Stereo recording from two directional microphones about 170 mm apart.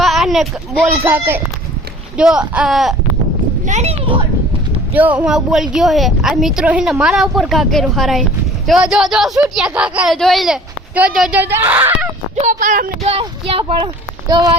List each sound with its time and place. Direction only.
0.0 s a sound: centre (ahead or behind)
1.0 s speech: 15° right (ahead or behind)
3.7 s speech: 40° right (ahead or behind)
4.9 s speech: 10° right (ahead or behind)
12.4 s speech: 50° right (ahead or behind)
13.1 s speech: 35° right (ahead or behind)